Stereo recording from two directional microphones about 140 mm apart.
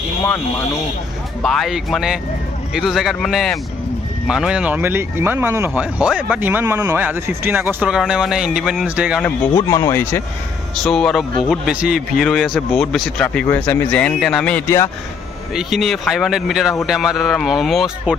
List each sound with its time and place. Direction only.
0.2 s a man's voice: 15° left (ahead or behind)
1.4 s speech: centre (ahead or behind)
9.5 s speech: 20° left (ahead or behind)
10.8 s speech: 5° left (ahead or behind)
11.4 s a man's voice: 5° right (ahead or behind)